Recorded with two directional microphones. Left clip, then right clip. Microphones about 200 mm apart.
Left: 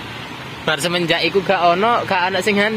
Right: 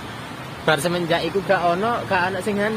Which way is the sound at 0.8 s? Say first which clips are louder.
Left 4 dB; 15° left (ahead or behind).